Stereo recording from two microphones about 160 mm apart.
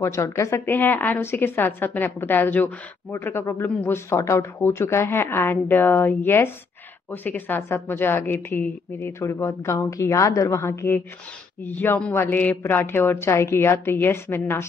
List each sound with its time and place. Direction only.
0.0 s a woman's voice: 20° left (ahead or behind)